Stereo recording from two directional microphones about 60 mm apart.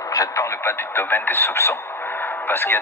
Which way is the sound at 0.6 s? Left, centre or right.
Left.